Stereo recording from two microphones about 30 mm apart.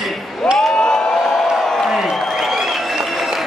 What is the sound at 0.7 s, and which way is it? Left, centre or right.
Speech, left.